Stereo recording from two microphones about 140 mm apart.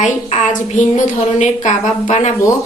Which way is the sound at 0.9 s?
60° left (ahead or behind).